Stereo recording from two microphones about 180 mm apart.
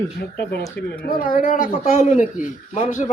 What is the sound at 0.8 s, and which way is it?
Speech, 70° left (ahead or behind).